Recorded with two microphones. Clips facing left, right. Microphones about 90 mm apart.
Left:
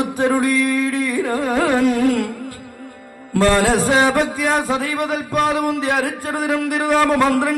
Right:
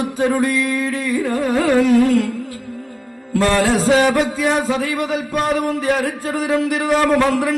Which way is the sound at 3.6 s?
55° left (ahead or behind).